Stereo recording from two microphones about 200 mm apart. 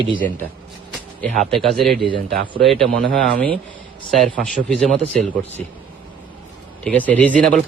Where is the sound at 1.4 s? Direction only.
Centre (ahead or behind).